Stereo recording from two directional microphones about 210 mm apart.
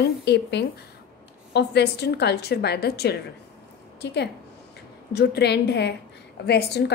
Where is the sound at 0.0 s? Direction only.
55° left (ahead or behind).